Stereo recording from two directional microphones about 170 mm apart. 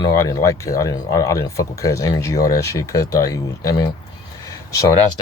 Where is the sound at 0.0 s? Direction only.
20° left (ahead or behind).